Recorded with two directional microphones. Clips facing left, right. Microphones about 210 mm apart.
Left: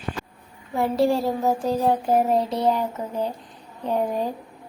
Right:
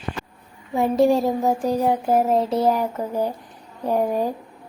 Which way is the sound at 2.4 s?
35° right (ahead or behind).